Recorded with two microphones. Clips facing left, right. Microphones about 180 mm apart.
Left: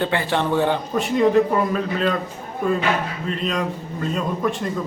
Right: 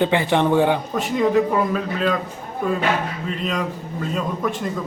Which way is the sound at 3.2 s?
5° right (ahead or behind).